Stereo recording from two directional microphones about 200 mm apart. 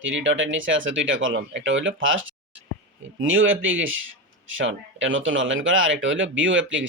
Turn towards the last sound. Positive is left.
turn(degrees=-70)  # may be behind; listen again after turning